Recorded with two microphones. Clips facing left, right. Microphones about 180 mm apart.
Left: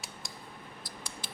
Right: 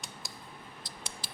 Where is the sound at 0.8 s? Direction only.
25° right (ahead or behind).